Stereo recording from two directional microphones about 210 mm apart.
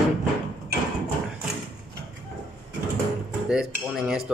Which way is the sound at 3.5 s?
Centre (ahead or behind).